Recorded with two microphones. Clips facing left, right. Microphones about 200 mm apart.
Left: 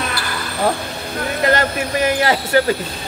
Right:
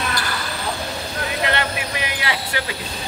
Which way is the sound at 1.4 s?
40° left (ahead or behind).